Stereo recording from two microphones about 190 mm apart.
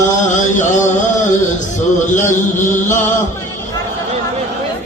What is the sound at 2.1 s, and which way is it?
Speech, 40° left (ahead or behind).